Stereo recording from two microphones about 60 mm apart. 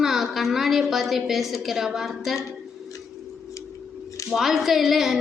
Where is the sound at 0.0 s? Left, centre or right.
Centre.